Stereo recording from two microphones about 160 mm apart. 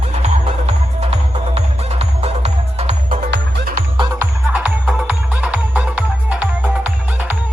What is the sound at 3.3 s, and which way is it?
Music, 80° right.